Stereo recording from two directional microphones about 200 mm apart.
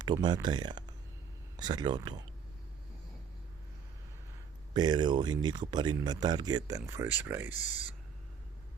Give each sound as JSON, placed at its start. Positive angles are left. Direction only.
{"t": 0.0, "sound": "speech", "side_deg": -20}
{"t": 4.7, "sound": "speech", "side_deg": -20}
{"t": 7.5, "sound": "speech", "side_deg": 40}